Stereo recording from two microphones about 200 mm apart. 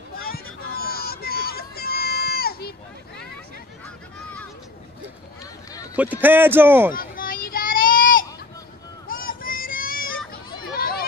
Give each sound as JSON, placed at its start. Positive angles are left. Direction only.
{"t": 0.8, "sound": "run", "side_deg": 50}
{"t": 5.9, "sound": "a man's voice", "side_deg": -10}
{"t": 6.9, "sound": "a sound", "side_deg": 45}
{"t": 10.8, "sound": "chatter", "side_deg": 50}